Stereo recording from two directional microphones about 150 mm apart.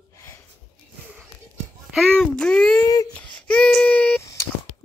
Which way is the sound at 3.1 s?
10° left (ahead or behind).